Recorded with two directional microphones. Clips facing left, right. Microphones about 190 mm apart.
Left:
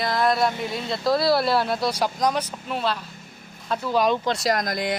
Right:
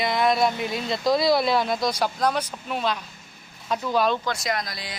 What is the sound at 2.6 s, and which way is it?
Speech, 10° right (ahead or behind).